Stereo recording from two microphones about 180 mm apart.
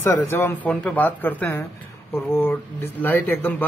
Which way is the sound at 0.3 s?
10° left (ahead or behind).